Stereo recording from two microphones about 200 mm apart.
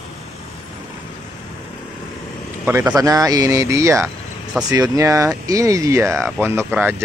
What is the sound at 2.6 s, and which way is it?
Speech, 10° right (ahead or behind).